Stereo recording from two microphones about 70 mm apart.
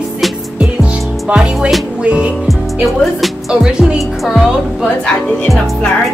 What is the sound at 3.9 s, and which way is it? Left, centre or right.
Speech, centre.